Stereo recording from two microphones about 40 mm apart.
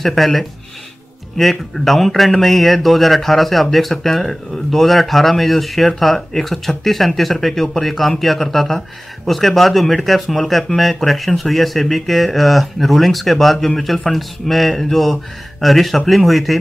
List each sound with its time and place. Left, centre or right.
0.0 s speech: centre